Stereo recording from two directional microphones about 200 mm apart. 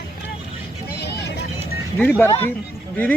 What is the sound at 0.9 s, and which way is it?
Vehicle, 55° left (ahead or behind).